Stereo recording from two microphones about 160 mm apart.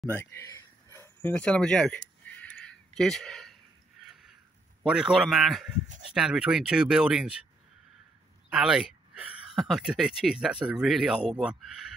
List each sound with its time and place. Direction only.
0.0 s a sound: 15° left (ahead or behind); by 4.4 s centre (ahead or behind)
4.8 s speech: 5° right (ahead or behind)
8.5 s speech: 5° right (ahead or behind)